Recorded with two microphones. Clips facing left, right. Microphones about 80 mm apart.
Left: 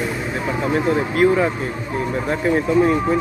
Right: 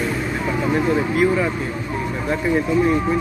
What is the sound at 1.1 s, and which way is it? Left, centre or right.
Speech, left.